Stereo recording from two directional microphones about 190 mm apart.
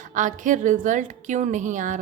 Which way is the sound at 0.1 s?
40° right (ahead or behind).